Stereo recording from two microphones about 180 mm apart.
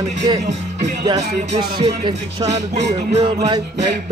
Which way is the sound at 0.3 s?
25° right (ahead or behind).